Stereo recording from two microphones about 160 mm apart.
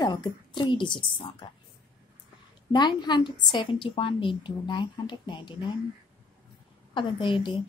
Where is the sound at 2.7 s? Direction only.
25° left (ahead or behind).